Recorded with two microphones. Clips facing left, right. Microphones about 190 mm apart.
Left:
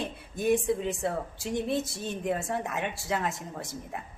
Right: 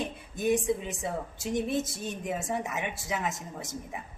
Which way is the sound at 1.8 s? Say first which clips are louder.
Even; 20° right (ahead or behind).